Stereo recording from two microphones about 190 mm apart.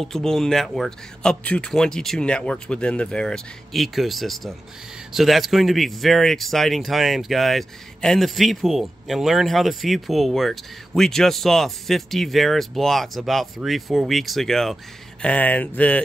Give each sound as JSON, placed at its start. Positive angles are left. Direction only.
{"t": 0.0, "sound": "speech", "side_deg": 0}